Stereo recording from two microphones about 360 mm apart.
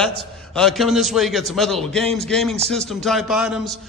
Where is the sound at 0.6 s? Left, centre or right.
Centre.